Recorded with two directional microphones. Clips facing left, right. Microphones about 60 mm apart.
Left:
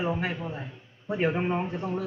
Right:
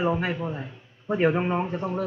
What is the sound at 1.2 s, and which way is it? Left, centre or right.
Speech, centre.